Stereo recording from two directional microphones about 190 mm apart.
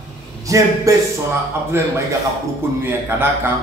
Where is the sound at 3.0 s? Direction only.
10° right (ahead or behind).